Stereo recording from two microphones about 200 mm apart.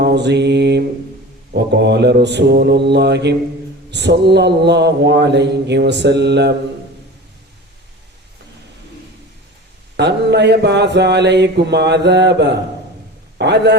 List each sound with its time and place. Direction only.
0.0 s mantra: 55° right (ahead or behind)
10.0 s mantra: 60° right (ahead or behind)